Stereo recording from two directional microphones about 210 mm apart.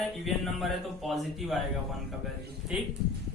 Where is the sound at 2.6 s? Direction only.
Centre (ahead or behind).